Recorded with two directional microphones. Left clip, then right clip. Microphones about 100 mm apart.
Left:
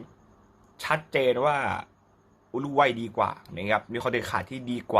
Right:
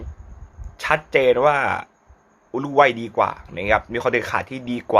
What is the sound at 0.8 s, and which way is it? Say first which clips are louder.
A man's voice: right 7 dB; 15° right (ahead or behind).